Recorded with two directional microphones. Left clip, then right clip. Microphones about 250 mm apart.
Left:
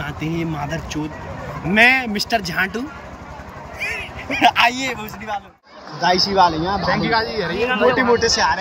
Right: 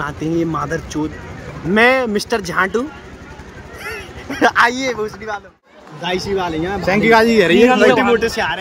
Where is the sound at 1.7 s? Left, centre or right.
Centre.